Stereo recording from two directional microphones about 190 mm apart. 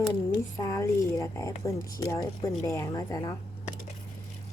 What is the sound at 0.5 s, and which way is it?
Speech, 15° left (ahead or behind).